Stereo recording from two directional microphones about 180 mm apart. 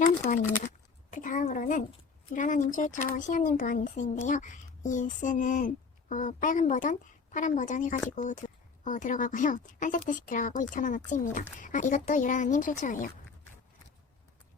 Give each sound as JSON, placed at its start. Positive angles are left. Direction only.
{"t": 0.2, "sound": "speech", "side_deg": 45}
{"t": 1.1, "sound": "a sound", "side_deg": 45}
{"t": 2.3, "sound": "speech", "side_deg": 45}